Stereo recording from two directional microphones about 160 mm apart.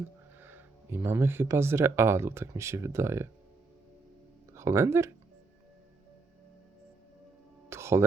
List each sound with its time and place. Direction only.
0.4 s speech: 15° right (ahead or behind)
4.5 s speech: 15° right (ahead or behind)
7.7 s a sound: 15° right (ahead or behind)